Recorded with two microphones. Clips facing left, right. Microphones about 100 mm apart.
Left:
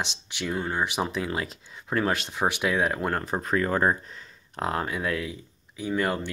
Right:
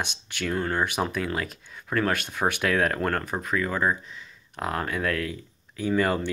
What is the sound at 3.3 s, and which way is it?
Speech, 35° left (ahead or behind).